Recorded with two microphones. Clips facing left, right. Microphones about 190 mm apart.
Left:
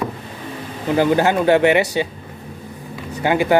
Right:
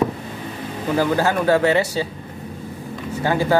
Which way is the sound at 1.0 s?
20° left (ahead or behind).